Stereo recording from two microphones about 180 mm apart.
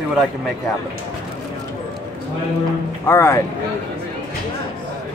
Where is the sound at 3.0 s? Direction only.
15° left (ahead or behind).